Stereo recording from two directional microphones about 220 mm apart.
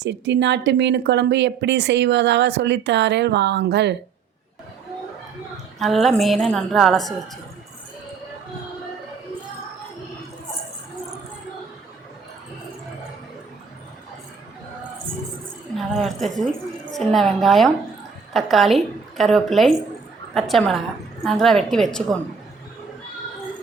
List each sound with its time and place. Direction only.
0.0 s speech: 50° right (ahead or behind)
5.8 s a woman's voice: centre (ahead or behind)
15.9 s a woman's voice: centre (ahead or behind)